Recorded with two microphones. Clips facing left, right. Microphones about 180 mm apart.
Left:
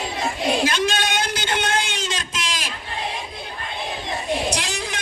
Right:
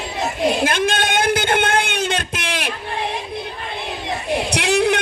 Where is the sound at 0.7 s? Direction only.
55° right (ahead or behind).